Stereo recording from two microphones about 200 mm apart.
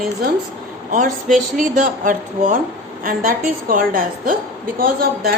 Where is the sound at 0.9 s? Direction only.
40° right (ahead or behind).